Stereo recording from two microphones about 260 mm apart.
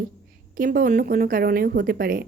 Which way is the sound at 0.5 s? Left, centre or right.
Right.